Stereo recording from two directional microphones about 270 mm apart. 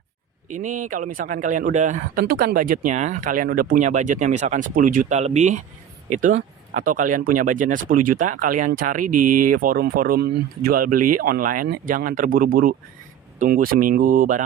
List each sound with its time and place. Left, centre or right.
0.5 s speech: right
9.1 s speech: right
9.4 s speech: right